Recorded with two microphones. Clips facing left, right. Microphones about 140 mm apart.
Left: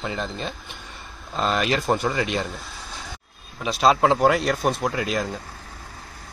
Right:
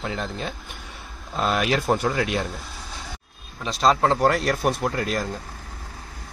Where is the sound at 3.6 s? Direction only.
5° left (ahead or behind).